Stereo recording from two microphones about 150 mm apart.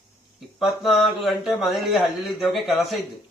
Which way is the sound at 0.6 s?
Centre (ahead or behind).